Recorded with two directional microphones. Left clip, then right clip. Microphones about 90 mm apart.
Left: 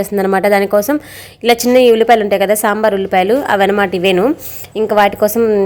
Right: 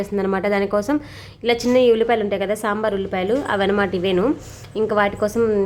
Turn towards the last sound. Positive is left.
turn(degrees=40)  # may be behind; listen again after turning